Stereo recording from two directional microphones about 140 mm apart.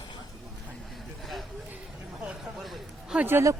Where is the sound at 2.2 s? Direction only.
5° right (ahead or behind).